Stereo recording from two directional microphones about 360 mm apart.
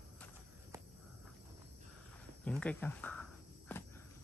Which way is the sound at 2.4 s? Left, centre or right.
Centre.